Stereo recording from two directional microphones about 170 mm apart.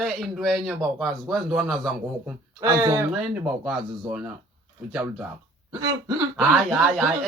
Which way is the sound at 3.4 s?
10° right (ahead or behind).